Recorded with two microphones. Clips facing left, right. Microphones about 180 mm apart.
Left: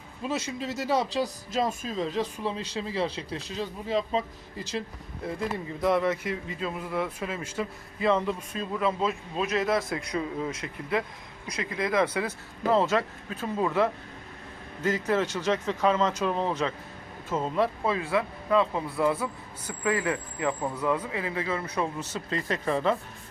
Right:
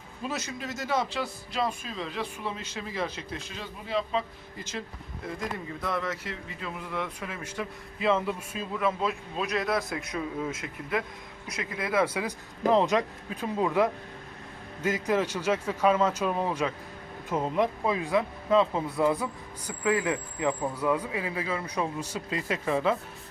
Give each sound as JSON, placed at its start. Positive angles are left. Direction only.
{"t": 0.2, "sound": "speech", "side_deg": 25}
{"t": 5.8, "sound": "speech", "side_deg": 20}
{"t": 8.0, "sound": "a man's voice", "side_deg": -5}